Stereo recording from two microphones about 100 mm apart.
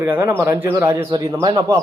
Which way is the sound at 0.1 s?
20° right (ahead or behind).